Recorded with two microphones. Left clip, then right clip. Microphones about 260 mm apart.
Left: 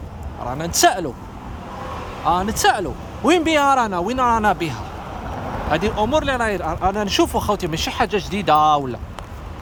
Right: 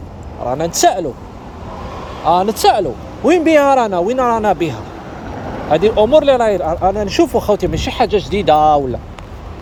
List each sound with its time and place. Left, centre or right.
0.8 s speech: centre
2.2 s speech: left
2.6 s speech: centre